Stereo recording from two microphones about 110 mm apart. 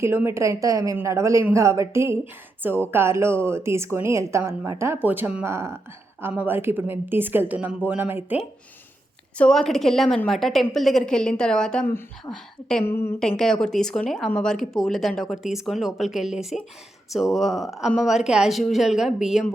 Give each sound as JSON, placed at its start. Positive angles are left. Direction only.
{"t": 0.0, "sound": "a woman's voice", "side_deg": -20}
{"t": 9.4, "sound": "speech", "side_deg": 5}
{"t": 12.8, "sound": "a woman's voice", "side_deg": 20}
{"t": 13.1, "sound": "speech", "side_deg": 5}